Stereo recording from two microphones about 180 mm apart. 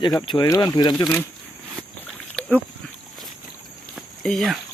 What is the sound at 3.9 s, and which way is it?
Walk, centre (ahead or behind).